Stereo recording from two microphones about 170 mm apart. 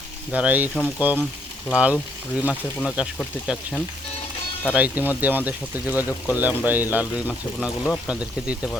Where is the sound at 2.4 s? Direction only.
10° left (ahead or behind).